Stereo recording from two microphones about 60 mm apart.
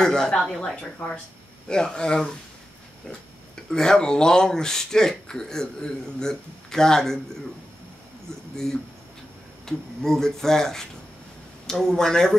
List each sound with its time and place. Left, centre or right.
0.0 s speech: centre
0.9 s speech: left
1.7 s speech: centre
3.7 s speech: centre
9.7 s speech: centre